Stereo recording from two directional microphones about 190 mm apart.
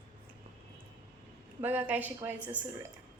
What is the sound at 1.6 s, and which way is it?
A woman's voice, 10° right (ahead or behind).